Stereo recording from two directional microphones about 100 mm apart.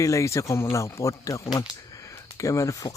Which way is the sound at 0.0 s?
30° left (ahead or behind).